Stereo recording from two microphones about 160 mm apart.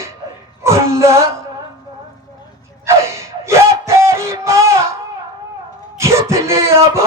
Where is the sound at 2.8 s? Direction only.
15° right (ahead or behind).